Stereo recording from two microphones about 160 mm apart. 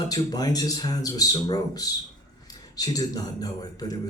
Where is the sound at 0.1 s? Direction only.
25° left (ahead or behind).